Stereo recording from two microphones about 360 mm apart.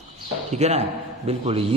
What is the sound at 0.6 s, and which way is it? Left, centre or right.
A man's voice, centre.